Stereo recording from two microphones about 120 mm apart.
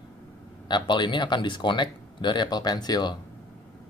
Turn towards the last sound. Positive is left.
turn(degrees=35)  # may be behind; listen again after turning